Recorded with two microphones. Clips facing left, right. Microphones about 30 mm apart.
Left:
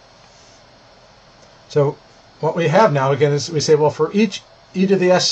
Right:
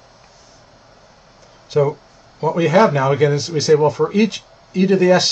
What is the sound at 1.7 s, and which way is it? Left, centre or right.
Speech, centre.